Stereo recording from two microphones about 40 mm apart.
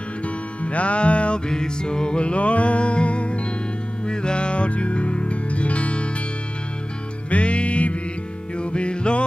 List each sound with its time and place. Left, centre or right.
0.6 s music: left
1.5 s music: centre
7.2 s music: left